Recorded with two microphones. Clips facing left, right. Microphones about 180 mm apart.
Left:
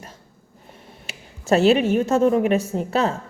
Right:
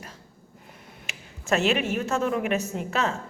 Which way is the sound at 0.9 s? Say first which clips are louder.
Left 3 dB; 35° left (ahead or behind).